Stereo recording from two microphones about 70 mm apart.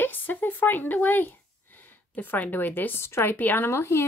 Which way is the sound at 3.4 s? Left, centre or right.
Left.